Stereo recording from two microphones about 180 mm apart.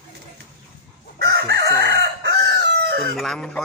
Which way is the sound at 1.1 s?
70° right (ahead or behind).